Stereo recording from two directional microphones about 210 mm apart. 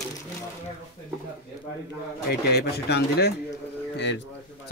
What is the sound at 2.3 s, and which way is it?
Speech, 50° left (ahead or behind).